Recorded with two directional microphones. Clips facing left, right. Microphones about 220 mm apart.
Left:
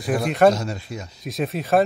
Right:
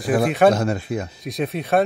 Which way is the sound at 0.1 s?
55° right (ahead or behind).